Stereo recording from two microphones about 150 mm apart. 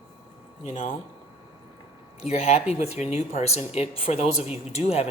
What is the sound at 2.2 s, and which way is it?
Speech, 45° left (ahead or behind).